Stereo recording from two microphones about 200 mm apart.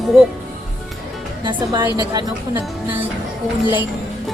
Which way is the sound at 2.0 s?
20° right (ahead or behind).